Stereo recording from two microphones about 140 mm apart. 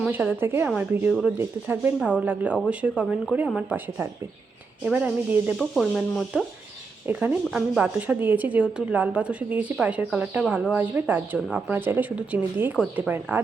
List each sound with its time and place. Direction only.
0.1 s a woman's voice: 15° right (ahead or behind)
5.5 s speech: 5° left (ahead or behind)
7.1 s a woman's voice: 10° right (ahead or behind)